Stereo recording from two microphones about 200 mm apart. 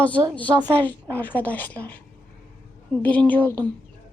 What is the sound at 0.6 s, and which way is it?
A woman's voice, 10° left (ahead or behind).